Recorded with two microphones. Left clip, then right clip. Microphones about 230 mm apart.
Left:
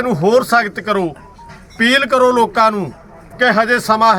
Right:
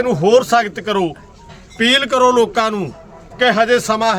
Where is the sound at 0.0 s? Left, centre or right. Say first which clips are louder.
Right 1 dB; centre.